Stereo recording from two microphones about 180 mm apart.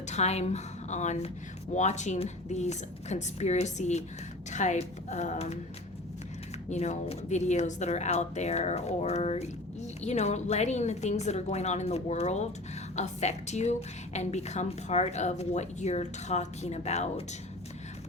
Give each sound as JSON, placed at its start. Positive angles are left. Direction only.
{"t": 0.1, "sound": "a woman's voice", "side_deg": 35}
{"t": 6.7, "sound": "a woman's voice", "side_deg": 40}